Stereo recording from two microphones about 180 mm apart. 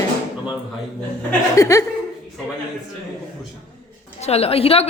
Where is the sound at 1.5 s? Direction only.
20° left (ahead or behind).